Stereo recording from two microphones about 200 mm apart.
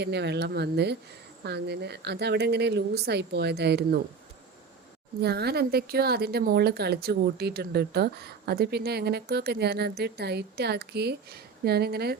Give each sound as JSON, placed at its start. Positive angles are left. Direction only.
{"t": 0.0, "sound": "a woman's voice", "side_deg": -55}
{"t": 5.2, "sound": "a woman's voice", "side_deg": -55}